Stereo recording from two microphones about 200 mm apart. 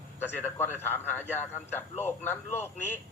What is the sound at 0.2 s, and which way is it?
A man's voice, 10° left (ahead or behind).